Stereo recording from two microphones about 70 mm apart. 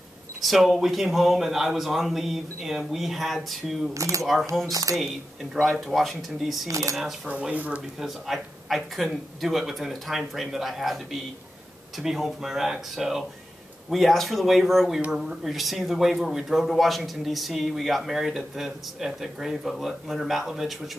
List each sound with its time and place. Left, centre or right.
0.4 s speech: centre
3.9 s speech: right
4.2 s speech: centre
7.2 s speech: right
8.0 s speech: centre